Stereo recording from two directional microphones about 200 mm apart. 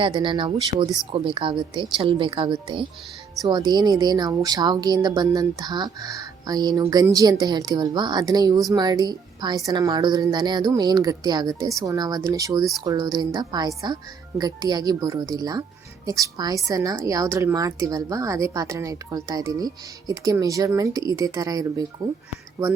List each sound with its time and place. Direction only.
0.0 s a woman's voice: 25° right (ahead or behind)